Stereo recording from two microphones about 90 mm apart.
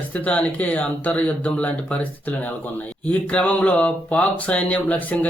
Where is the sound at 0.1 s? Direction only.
15° left (ahead or behind).